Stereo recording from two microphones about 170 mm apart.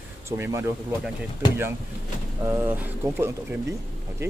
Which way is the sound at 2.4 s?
15° right (ahead or behind).